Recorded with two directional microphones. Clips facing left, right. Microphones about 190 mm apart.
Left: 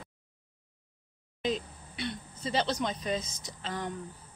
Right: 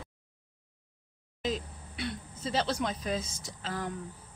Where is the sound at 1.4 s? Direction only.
Centre (ahead or behind).